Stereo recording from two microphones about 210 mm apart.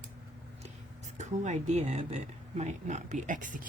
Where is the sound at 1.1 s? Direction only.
35° right (ahead or behind).